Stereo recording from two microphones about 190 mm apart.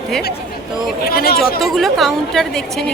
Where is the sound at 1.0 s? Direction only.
50° left (ahead or behind).